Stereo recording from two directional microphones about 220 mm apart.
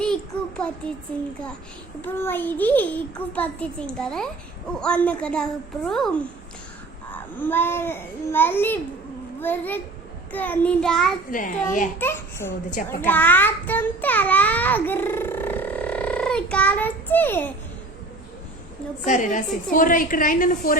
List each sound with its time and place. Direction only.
0.0 s a sound: 5° left (ahead or behind)
2.0 s a child's voice: 10° left (ahead or behind)
4.8 s child singing: 5° left (ahead or behind)
7.1 s a child's voice: 10° left (ahead or behind)
10.3 s child singing: 10° left (ahead or behind)
11.3 s a woman's voice: 40° left (ahead or behind)
11.9 s a child's voice: 10° left (ahead or behind)
19.0 s a woman's voice: 35° left (ahead or behind)